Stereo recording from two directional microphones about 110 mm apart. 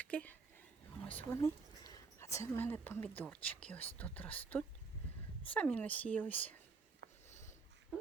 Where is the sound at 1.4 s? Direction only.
30° left (ahead or behind).